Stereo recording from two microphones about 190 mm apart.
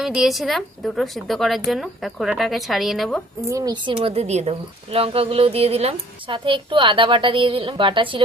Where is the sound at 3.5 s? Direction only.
20° right (ahead or behind).